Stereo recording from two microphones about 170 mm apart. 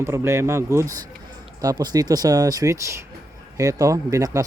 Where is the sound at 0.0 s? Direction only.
15° right (ahead or behind).